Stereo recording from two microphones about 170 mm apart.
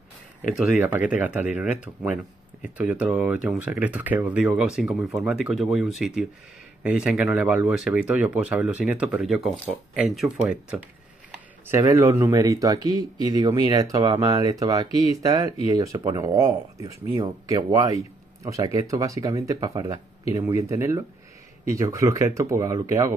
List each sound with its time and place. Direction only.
0.7 s speech: 10° right (ahead or behind)